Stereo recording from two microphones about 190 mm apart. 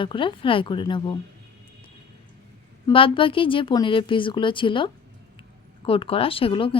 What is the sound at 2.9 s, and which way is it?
Speech, 25° left (ahead or behind).